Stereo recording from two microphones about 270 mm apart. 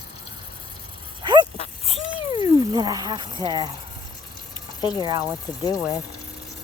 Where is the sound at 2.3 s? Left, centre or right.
Centre.